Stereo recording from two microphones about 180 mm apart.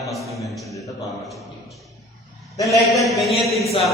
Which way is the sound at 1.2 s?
Centre (ahead or behind).